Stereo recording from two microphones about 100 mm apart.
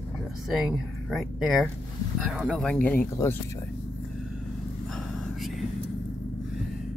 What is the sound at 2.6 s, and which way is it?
Speech, 15° left (ahead or behind).